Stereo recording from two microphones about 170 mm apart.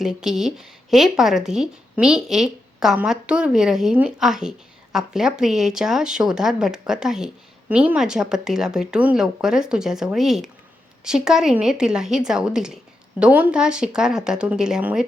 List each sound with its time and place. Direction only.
0.0 s a woman's voice: 5° right (ahead or behind)